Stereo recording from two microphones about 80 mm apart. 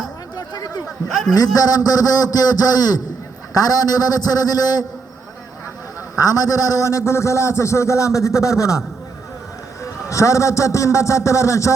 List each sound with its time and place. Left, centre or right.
0.3 s a sound: left
1.0 s a man's voice: centre
1.5 s a man's voice: left
6.1 s a man's voice: left
9.8 s a man's voice: left